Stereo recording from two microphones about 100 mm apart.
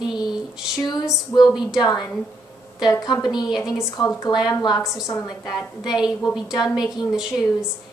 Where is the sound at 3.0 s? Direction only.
45° left (ahead or behind).